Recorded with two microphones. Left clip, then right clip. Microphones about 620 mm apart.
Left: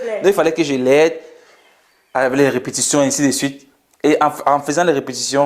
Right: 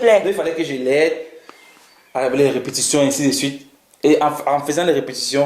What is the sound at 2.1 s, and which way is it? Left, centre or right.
Speech, left.